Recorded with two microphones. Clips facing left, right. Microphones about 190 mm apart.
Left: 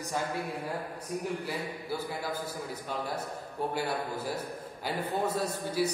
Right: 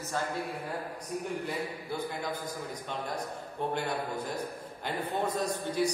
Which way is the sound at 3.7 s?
5° left (ahead or behind).